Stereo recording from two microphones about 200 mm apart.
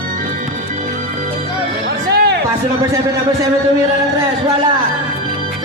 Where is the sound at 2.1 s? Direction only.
55° right (ahead or behind).